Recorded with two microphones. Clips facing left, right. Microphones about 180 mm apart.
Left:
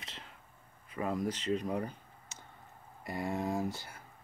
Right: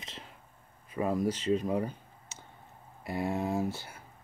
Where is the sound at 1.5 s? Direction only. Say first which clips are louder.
Right 4 dB; 20° right (ahead or behind).